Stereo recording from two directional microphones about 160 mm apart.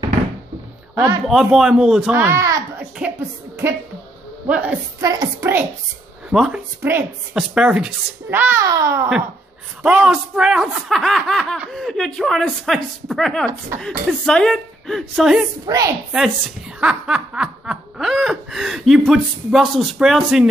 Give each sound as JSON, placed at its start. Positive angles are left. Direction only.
{"t": 0.9, "sound": "a child's voice", "side_deg": -20}
{"t": 1.2, "sound": "snicker", "side_deg": -5}
{"t": 2.1, "sound": "a child's voice", "side_deg": -15}
{"t": 3.0, "sound": "music", "side_deg": -10}
{"t": 4.5, "sound": "a child's voice", "side_deg": -10}
{"t": 5.0, "sound": "a child's voice", "side_deg": -20}
{"t": 6.3, "sound": "snicker", "side_deg": -5}
{"t": 6.8, "sound": "a child's voice", "side_deg": -15}
{"t": 9.8, "sound": "snicker", "side_deg": -5}
{"t": 15.6, "sound": "a child's voice", "side_deg": -25}
{"t": 16.8, "sound": "snicker", "side_deg": -5}